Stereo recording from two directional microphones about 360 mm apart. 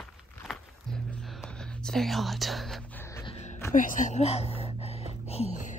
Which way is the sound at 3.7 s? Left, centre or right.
Left.